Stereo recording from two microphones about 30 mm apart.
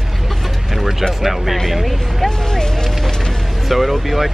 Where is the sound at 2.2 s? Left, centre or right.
Left.